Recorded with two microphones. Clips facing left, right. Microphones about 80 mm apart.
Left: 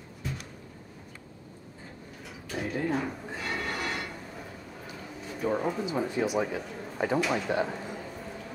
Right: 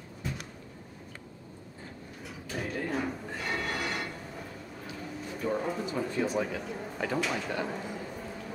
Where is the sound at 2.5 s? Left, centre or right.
Centre.